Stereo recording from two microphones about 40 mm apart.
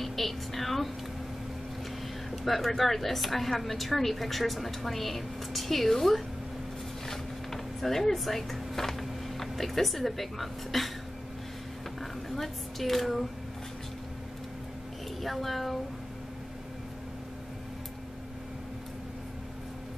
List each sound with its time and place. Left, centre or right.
0.0 s a sound: centre
2.3 s a woman's voice: centre
12.0 s speech: centre
15.2 s a woman's voice: centre